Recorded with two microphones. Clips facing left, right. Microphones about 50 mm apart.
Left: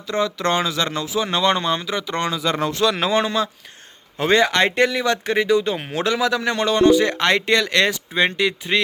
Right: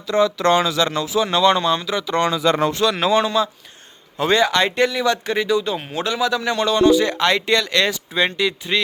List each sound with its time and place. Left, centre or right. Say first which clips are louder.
0.1 s speech: right 4 dB; centre
1.2 s speech: right 3 dB; left
2.1 s speech: right 5 dB; centre
3.1 s speech: right 2 dB; left
6.0 s speech: left 1 dB; left
6.4 s speech: right 1 dB; left